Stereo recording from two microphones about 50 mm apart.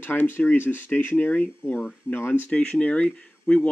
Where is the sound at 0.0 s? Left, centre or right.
Left.